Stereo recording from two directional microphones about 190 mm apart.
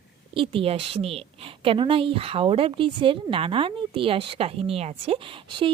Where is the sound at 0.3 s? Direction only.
25° right (ahead or behind).